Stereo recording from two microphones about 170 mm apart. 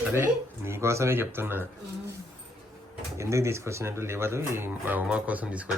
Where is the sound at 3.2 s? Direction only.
15° right (ahead or behind).